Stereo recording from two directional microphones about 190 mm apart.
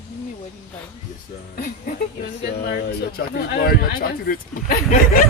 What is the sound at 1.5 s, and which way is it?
Speech, 55° left (ahead or behind).